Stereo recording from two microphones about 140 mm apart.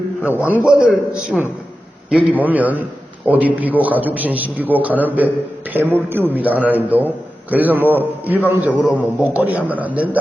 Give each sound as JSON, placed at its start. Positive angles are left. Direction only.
{"t": 0.2, "sound": "a man's voice", "side_deg": 15}
{"t": 0.4, "sound": "a man's voice", "side_deg": -10}